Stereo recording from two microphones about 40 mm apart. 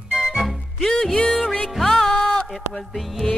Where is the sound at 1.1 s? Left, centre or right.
Left.